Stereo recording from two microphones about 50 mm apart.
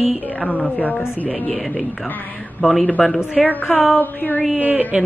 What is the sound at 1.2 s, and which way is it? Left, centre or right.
Speech, left.